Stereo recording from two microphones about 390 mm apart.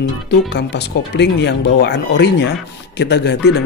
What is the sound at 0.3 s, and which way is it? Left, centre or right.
Speech, left.